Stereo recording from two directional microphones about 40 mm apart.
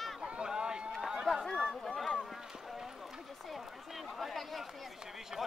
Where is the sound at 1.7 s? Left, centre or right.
Centre.